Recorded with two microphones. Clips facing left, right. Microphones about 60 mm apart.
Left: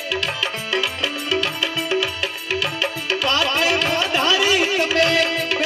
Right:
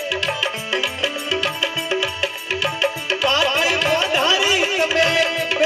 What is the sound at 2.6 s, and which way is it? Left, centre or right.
Music, right.